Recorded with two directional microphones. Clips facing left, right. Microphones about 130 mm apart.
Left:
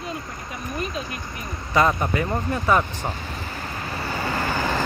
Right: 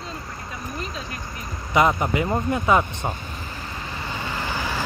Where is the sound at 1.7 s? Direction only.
20° right (ahead or behind).